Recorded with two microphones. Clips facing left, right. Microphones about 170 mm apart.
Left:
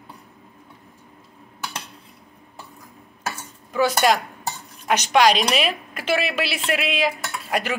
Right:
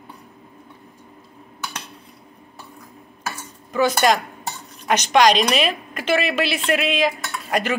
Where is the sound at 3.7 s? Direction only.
5° left (ahead or behind).